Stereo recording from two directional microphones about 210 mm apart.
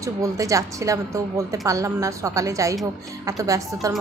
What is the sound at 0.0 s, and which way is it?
A woman's voice, 15° right (ahead or behind).